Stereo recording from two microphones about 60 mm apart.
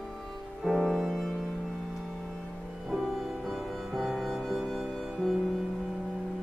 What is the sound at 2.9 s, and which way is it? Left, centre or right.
Music, centre.